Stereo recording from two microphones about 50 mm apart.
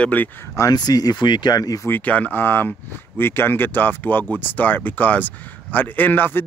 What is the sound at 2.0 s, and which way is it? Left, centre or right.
Speech, left.